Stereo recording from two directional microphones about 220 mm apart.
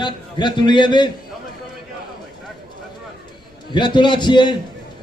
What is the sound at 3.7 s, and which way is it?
Speech, 20° left (ahead or behind).